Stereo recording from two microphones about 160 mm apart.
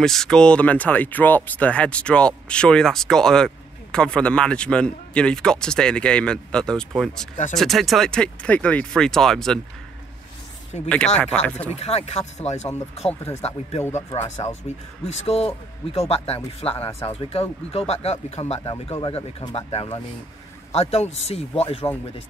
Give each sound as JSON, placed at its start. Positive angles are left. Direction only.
{"t": 0.0, "sound": "speech", "side_deg": 5}
{"t": 11.4, "sound": "speech", "side_deg": 10}
{"t": 11.7, "sound": "speech", "side_deg": 40}